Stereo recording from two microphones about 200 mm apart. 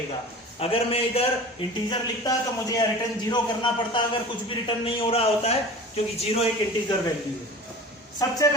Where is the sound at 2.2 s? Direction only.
20° left (ahead or behind).